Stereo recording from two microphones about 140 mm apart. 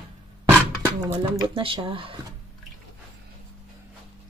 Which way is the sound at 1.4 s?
35° right (ahead or behind).